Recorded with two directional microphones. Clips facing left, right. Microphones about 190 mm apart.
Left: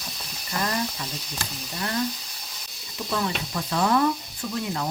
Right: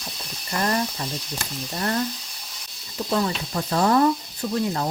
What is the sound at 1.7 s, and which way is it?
Speech, 50° right (ahead or behind).